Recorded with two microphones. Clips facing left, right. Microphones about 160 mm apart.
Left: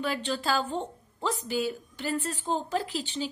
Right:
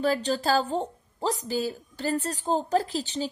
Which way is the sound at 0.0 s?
40° right (ahead or behind).